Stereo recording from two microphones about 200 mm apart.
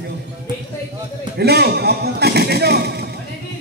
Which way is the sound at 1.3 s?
55° right (ahead or behind).